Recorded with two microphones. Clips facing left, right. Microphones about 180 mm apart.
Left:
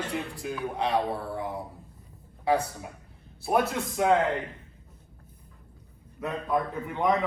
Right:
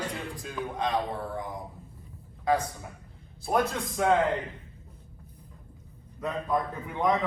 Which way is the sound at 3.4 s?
5° left (ahead or behind).